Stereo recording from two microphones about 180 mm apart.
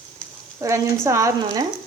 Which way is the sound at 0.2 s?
10° left (ahead or behind).